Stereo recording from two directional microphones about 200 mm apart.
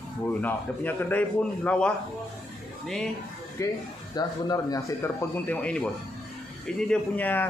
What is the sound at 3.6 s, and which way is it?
Speech, 15° left (ahead or behind).